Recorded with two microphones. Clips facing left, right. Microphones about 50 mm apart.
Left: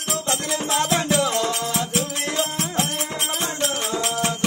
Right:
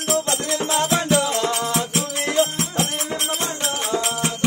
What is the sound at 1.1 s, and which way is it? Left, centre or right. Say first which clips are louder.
Music: right 1 dB; right.